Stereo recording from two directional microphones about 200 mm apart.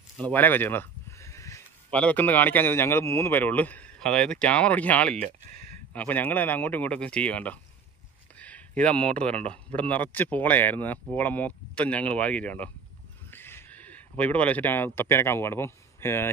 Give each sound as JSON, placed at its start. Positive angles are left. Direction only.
{"t": 0.2, "sound": "speech", "side_deg": 10}
{"t": 5.2, "sound": "speech", "side_deg": -40}
{"t": 5.9, "sound": "speech", "side_deg": 10}